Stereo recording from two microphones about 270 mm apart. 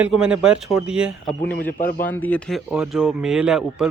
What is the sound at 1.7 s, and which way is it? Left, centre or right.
Speech, left.